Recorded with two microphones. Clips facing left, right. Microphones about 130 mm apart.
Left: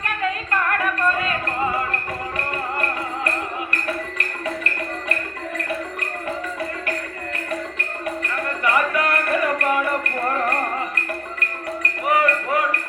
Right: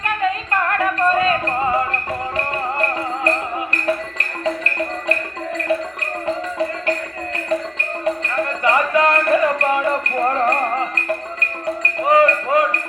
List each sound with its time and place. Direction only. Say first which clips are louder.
0.0 s music: right 4 dB; 25° right (ahead or behind)
6.2 s music: right 7 dB; 25° right (ahead or behind)
8.6 s music: right 4 dB; 25° right (ahead or behind)